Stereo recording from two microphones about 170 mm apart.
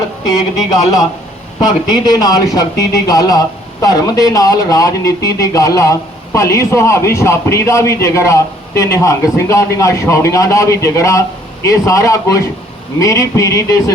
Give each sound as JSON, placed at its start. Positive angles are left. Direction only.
{"t": 0.3, "sound": "speech", "side_deg": 20}